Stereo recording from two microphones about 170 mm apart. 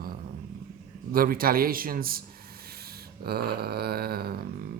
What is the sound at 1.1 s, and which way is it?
Speech, 60° right (ahead or behind).